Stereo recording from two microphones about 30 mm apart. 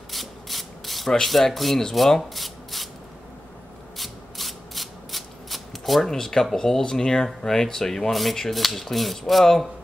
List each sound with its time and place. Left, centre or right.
0.1 s sanding: centre
1.2 s speech: centre
2.0 s rub: centre
4.0 s rub: centre
6.0 s speech: centre
8.1 s speech: centre